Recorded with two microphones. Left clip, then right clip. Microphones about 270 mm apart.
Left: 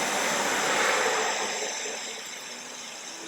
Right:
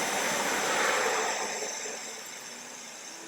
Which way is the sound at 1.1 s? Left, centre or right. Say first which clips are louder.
Left 3 dB; centre.